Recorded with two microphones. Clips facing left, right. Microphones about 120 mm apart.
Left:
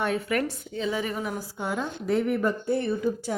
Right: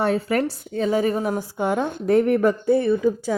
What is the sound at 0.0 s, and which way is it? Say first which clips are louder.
Speech: right 5 dB; 35° right (ahead or behind).